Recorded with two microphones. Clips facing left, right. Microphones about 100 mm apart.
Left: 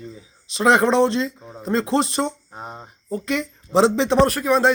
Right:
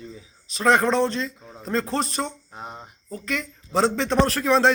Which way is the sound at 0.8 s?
Centre (ahead or behind).